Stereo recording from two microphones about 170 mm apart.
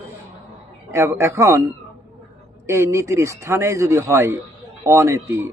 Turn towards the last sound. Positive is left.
turn(degrees=-15)  # may be behind; listen again after turning